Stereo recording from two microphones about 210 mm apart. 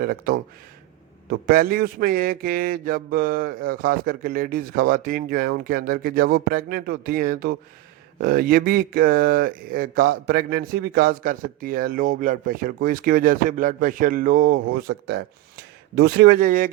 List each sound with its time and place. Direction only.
0.0 s speech: 45° right (ahead or behind)